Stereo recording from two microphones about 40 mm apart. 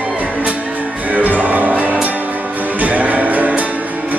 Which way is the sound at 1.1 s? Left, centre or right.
Right.